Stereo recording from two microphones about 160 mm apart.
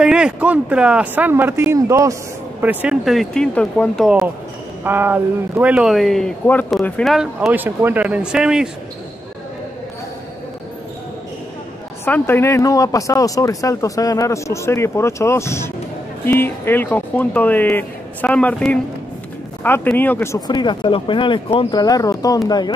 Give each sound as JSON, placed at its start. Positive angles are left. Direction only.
{"t": 0.0, "sound": "speech", "side_deg": -5}
{"t": 4.8, "sound": "speech", "side_deg": -15}
{"t": 7.3, "sound": "speech", "side_deg": -10}
{"t": 12.0, "sound": "speech", "side_deg": 15}
{"t": 20.3, "sound": "speech", "side_deg": 25}